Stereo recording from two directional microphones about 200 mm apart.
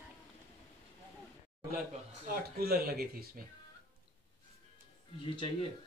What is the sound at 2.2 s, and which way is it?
Speech, 50° right (ahead or behind).